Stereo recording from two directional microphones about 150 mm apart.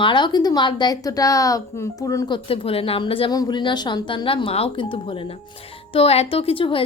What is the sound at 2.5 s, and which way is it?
A woman's voice, 40° left (ahead or behind).